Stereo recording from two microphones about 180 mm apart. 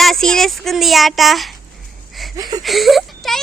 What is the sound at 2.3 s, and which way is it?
Speech, 20° right (ahead or behind).